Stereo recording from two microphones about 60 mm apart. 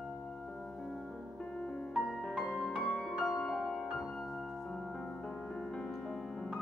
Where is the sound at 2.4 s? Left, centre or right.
Centre.